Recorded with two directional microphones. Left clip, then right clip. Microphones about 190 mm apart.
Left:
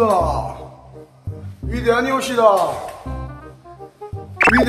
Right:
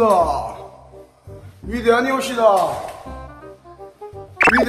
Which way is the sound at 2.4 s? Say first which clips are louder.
Left 1 dB; 45° left (ahead or behind).